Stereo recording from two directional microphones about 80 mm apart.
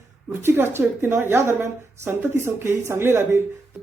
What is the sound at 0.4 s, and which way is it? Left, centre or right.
A woman's voice, right.